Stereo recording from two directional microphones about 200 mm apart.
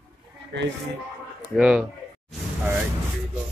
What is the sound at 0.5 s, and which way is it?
Speech, 60° right (ahead or behind).